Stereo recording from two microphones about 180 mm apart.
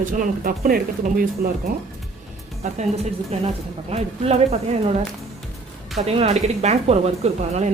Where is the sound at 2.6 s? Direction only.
40° right (ahead or behind).